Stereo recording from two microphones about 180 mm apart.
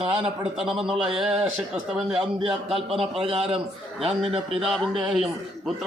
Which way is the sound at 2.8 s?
30° right (ahead or behind).